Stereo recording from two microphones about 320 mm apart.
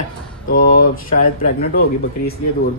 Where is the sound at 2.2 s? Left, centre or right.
Left.